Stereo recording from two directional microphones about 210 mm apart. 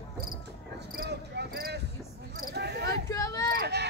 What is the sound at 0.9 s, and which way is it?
Cricket, 50° right (ahead or behind).